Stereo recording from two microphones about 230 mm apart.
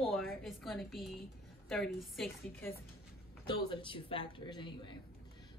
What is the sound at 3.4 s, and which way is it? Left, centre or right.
Speech, left.